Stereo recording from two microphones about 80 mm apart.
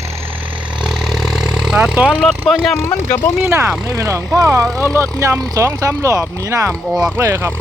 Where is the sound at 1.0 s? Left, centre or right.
Centre.